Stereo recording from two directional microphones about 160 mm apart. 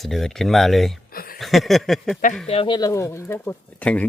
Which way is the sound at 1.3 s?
Centre (ahead or behind).